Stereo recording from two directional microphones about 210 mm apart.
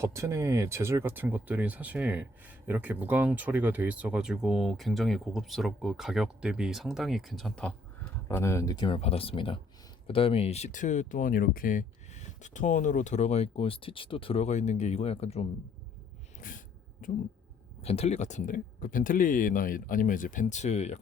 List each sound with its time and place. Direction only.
0.0 s speech: 15° right (ahead or behind); by 15.4 s 30° left (ahead or behind)
16.4 s sneeze: 40° left (ahead or behind)
17.8 s speech: 30° left (ahead or behind)